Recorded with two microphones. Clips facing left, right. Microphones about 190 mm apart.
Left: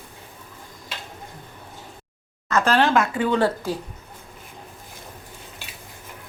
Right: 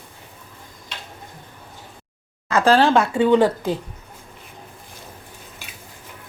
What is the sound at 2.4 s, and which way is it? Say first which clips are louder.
Speech: right 4 dB; 35° right (ahead or behind).